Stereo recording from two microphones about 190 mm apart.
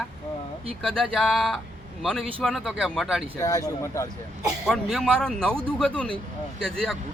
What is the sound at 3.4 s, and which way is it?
Speech, 20° left (ahead or behind).